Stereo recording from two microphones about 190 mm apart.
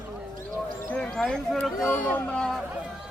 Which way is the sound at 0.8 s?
5° left (ahead or behind).